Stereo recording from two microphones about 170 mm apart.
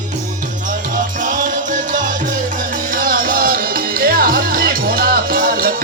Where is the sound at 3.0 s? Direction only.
55° right (ahead or behind).